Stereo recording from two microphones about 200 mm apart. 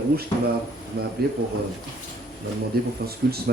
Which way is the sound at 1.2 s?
50° right (ahead or behind).